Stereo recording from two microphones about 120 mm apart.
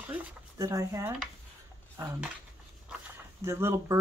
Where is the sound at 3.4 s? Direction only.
25° right (ahead or behind).